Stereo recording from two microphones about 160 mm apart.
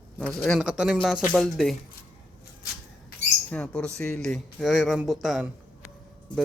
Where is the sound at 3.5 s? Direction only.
5° left (ahead or behind).